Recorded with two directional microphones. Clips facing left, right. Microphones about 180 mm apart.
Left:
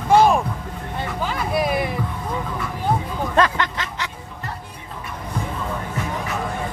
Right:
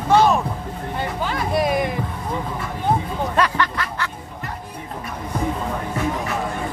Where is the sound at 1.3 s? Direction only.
Centre (ahead or behind).